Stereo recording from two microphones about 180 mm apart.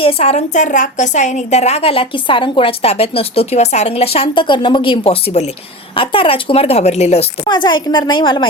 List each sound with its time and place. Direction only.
0.0 s a woman's voice: 35° left (ahead or behind)
7.4 s a woman's voice: 25° left (ahead or behind)